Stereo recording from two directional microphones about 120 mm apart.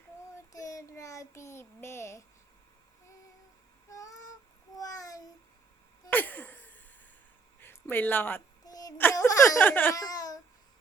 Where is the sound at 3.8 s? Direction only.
30° left (ahead or behind).